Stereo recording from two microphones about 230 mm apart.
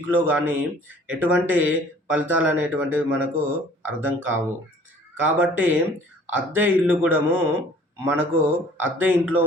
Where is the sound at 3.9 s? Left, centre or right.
Right.